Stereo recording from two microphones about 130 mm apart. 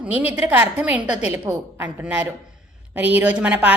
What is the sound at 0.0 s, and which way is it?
A woman's voice, 10° right (ahead or behind).